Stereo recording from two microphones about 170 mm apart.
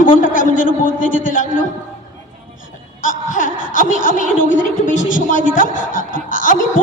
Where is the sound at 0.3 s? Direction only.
50° left (ahead or behind).